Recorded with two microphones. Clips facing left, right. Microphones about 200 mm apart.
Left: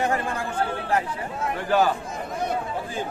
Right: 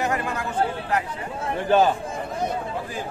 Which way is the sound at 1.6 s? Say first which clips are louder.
Right 3 dB; 20° right (ahead or behind).